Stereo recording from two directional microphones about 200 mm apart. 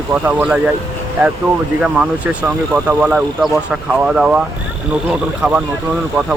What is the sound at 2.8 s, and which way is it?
Speech, 5° right (ahead or behind).